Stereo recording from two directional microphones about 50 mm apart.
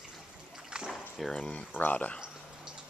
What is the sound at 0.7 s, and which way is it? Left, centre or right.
Water, centre.